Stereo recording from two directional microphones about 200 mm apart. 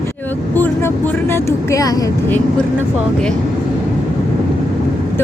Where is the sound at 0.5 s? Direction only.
10° left (ahead or behind).